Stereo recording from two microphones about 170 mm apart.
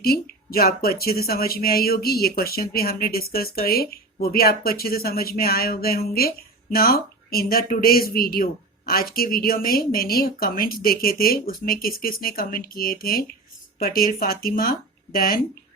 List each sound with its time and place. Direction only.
0.0 s speech: 65° left (ahead or behind)